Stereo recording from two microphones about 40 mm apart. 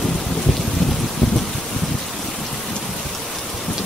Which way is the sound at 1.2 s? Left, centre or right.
Centre.